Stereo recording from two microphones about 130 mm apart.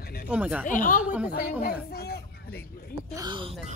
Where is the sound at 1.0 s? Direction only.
10° right (ahead or behind).